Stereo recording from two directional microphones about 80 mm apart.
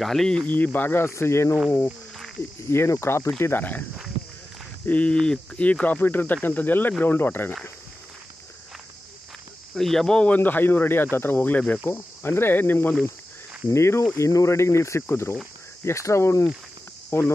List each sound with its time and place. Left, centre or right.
0.0 s speech: centre
0.5 s speech: left
2.7 s speech: left
4.8 s speech: centre
9.8 s speech: centre
10.3 s speech: left